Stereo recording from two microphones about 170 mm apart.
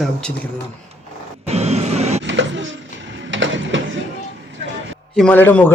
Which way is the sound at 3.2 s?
90° right.